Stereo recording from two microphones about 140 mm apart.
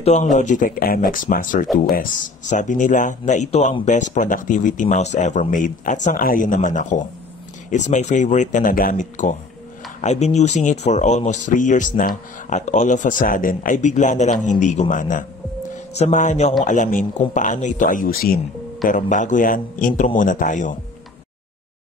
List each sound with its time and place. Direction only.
0.0 s speech: 55° left (ahead or behind)
0.4 s speech: 70° left (ahead or behind)
10.0 s speech: 55° left (ahead or behind); by 15.2 s 70° left (ahead or behind)
15.9 s speech: 55° left (ahead or behind); by 18.4 s 90° left
18.9 s speech: 65° left (ahead or behind)